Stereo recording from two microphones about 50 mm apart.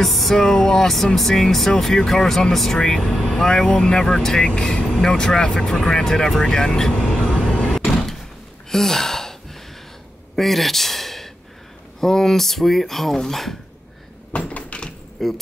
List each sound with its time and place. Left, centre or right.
0.0 s speech: centre
2.8 s speech: centre
8.6 s gasp: centre
12.0 s speech: centre
14.3 s cupboard open or close: left
15.2 s speech: centre